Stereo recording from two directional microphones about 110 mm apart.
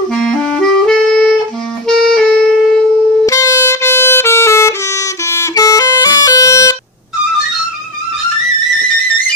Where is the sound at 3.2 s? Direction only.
30° left (ahead or behind).